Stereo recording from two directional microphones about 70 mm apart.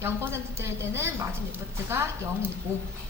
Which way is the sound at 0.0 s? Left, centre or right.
Right.